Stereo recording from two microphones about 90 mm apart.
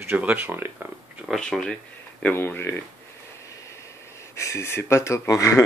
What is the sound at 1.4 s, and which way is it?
Speech, 10° left (ahead or behind).